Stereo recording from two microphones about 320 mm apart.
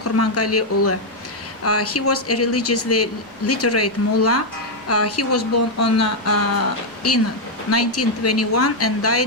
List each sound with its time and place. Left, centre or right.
0.0 s speech: left
7.7 s speech: left